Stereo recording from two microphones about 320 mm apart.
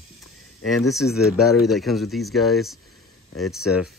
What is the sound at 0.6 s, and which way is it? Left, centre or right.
Speech, centre.